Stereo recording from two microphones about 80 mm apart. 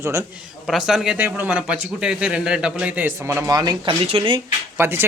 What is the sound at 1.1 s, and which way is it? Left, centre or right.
A man's voice, right.